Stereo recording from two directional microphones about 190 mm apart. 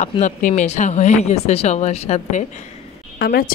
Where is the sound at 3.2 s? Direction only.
55° left (ahead or behind).